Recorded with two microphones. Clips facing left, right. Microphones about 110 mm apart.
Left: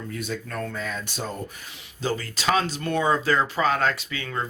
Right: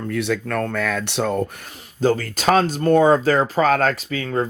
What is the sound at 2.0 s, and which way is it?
Speech, 50° right (ahead or behind).